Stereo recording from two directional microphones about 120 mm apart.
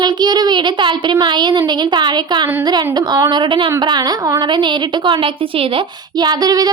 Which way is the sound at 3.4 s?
45° right (ahead or behind).